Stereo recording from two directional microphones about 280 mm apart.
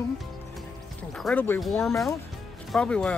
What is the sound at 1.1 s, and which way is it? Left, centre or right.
Speech, centre.